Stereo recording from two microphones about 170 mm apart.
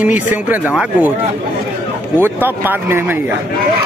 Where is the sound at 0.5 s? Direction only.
10° right (ahead or behind).